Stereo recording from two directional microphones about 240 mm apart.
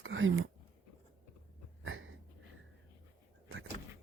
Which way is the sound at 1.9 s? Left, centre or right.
Right.